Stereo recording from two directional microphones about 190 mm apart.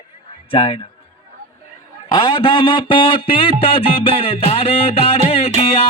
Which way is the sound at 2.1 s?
25° left (ahead or behind).